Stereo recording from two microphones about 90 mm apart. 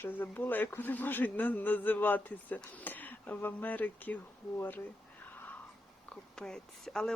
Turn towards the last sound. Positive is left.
turn(degrees=5)  # may be behind; listen again after turning